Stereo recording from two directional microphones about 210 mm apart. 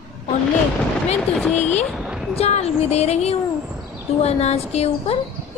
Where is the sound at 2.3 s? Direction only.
30° left (ahead or behind).